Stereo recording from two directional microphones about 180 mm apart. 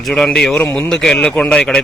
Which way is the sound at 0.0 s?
5° left (ahead or behind).